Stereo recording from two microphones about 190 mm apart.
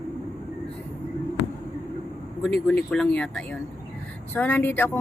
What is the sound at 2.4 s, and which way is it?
Speech, 5° left (ahead or behind).